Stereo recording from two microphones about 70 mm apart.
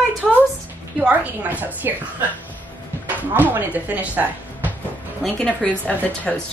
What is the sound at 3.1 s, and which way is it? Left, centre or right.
Speech, right.